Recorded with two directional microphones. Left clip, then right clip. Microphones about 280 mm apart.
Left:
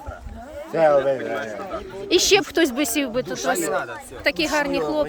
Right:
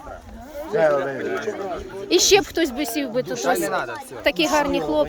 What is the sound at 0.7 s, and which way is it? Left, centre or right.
Speech, left.